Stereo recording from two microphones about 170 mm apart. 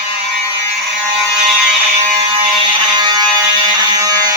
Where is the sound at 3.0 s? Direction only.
25° right (ahead or behind).